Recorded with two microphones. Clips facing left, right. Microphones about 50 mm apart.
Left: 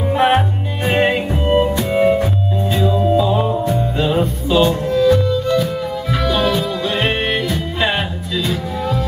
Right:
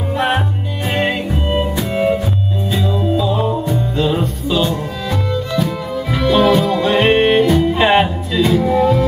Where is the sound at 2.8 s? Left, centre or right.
Centre.